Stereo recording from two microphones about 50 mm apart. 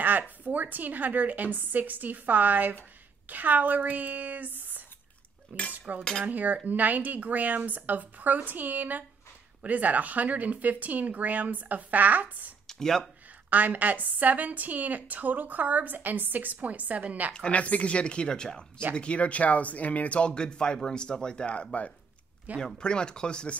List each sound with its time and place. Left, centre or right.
0.4 s speech: right
12.6 s speech: centre
13.5 s speech: right
17.3 s speech: left